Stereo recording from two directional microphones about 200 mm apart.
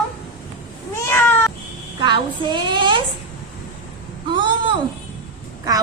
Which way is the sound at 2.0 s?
25° right (ahead or behind).